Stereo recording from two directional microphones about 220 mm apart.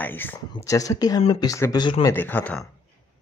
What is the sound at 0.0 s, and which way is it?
Speech, 10° left (ahead or behind).